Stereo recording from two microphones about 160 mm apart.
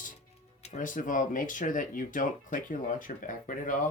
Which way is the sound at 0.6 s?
55° left (ahead or behind).